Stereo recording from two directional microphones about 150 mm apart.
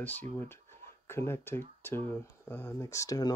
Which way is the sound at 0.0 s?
10° left (ahead or behind).